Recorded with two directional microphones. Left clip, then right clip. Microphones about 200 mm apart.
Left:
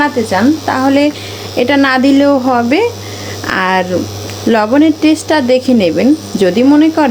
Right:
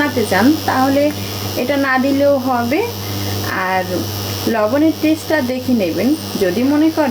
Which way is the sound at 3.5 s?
45° left (ahead or behind).